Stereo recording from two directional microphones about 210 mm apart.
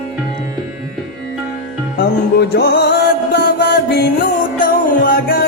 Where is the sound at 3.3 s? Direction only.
50° left (ahead or behind).